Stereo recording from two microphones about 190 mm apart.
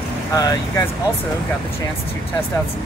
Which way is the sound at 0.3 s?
20° left (ahead or behind).